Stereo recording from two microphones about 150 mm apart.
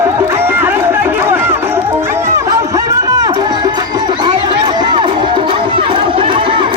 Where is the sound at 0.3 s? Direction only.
15° right (ahead or behind).